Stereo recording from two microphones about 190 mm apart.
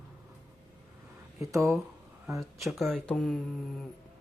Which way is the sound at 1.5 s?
15° right (ahead or behind).